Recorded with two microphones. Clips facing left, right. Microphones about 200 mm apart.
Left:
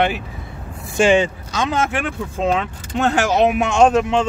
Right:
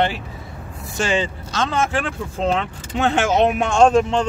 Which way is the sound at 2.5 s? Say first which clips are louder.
Left 1 dB; centre (ahead or behind).